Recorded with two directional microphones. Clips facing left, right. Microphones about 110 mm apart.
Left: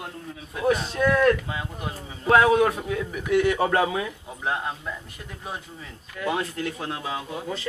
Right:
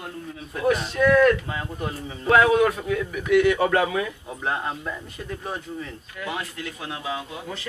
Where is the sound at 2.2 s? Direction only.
25° left (ahead or behind).